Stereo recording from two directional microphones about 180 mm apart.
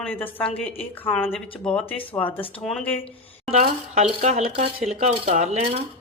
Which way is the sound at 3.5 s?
40° right (ahead or behind).